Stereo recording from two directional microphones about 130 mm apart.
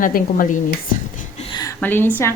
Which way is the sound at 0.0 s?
90° left.